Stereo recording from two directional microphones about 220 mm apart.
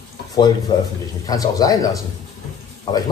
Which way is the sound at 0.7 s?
20° left (ahead or behind).